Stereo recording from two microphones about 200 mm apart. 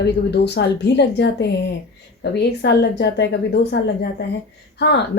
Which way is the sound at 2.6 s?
60° left (ahead or behind).